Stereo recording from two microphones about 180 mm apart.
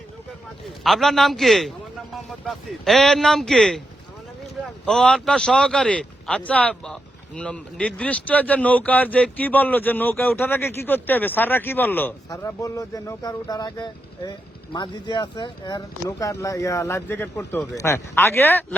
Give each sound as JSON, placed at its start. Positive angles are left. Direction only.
{"t": 0.9, "sound": "speech", "side_deg": 0}
{"t": 4.9, "sound": "speech", "side_deg": 5}